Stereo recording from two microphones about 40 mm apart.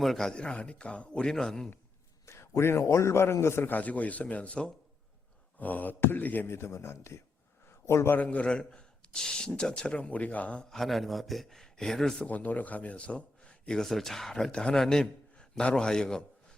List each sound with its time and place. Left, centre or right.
0.3 s speech: left
2.4 s a man's voice: left
3.7 s speech: left
5.5 s speech: left
6.0 s speech: left
6.2 s speech: left
6.5 s a man's voice: left
8.1 s speech: left
8.4 s speech: left
10.7 s a man's voice: centre
12.3 s a man's voice: left
13.7 s a man's voice: centre